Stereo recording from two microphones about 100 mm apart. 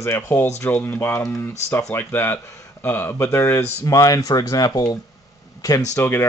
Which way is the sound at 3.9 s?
35° left (ahead or behind).